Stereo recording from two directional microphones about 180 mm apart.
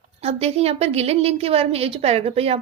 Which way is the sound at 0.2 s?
35° right (ahead or behind).